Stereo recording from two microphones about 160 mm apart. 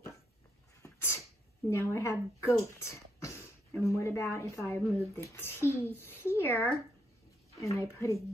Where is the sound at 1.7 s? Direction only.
15° left (ahead or behind).